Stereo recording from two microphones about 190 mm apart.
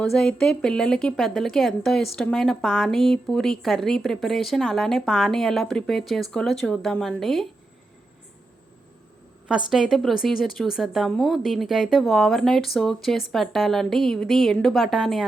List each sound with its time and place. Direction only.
0.0 s a woman's voice: 5° left (ahead or behind)
9.6 s a woman's voice: centre (ahead or behind)